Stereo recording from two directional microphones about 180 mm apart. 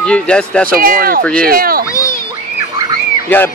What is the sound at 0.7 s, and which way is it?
Speech, 55° right (ahead or behind).